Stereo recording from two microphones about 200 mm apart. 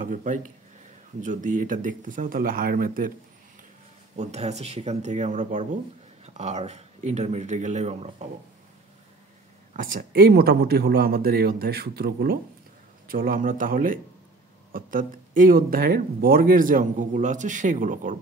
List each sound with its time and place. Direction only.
0.0 s speech: 40° right (ahead or behind)
4.2 s speech: 35° right (ahead or behind)
9.8 s speech: 45° right (ahead or behind)